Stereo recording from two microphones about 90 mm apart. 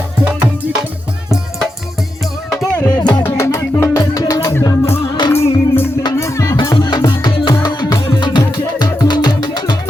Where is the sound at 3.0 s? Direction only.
50° left (ahead or behind).